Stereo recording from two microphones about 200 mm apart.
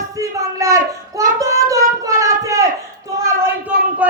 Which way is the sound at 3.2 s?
10° right (ahead or behind).